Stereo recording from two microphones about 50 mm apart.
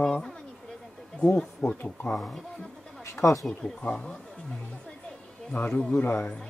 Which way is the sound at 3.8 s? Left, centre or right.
Left.